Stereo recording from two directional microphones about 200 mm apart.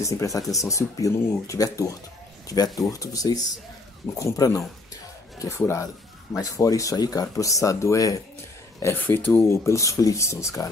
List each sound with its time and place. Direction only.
0.0 s speech: 15° left (ahead or behind)